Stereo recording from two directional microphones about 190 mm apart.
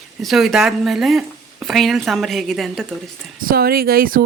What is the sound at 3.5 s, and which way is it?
Speech, 50° right (ahead or behind).